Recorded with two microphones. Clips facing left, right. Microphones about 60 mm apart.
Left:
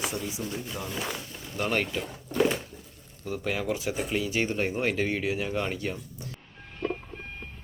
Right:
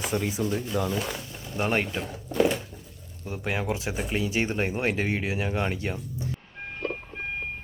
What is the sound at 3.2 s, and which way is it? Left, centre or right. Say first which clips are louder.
Speech: even; right.